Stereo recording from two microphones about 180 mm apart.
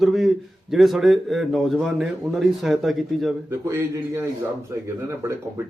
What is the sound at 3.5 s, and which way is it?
Speech, 15° right (ahead or behind).